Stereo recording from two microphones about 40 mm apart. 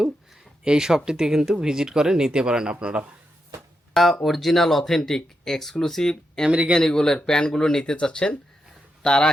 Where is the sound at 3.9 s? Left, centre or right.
Centre.